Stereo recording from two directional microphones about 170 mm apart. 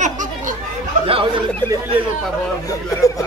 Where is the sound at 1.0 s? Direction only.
35° right (ahead or behind).